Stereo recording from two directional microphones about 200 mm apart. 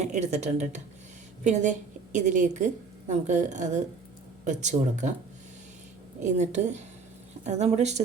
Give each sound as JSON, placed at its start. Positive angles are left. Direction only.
{"t": 0.0, "sound": "a woman's voice", "side_deg": -35}
{"t": 6.1, "sound": "a woman's voice", "side_deg": -35}